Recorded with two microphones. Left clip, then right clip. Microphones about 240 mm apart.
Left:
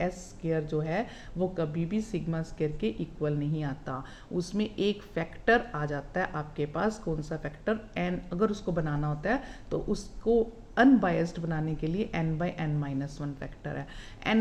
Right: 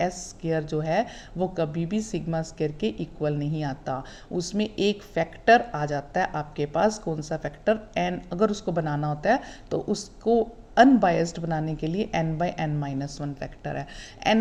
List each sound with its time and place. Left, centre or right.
0.2 s a woman's voice: right